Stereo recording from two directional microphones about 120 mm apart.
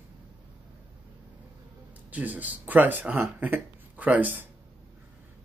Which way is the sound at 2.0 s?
15° right (ahead or behind).